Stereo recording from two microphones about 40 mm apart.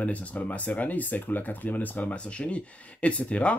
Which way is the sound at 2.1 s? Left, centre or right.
Left.